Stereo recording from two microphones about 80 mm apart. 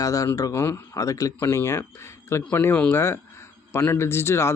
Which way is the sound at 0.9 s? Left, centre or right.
Left.